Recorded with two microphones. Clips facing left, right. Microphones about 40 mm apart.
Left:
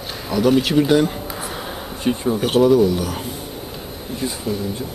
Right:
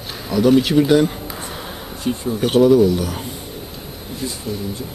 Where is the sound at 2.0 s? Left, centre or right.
Left.